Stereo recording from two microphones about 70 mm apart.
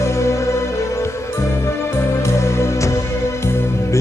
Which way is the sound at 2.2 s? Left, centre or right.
Left.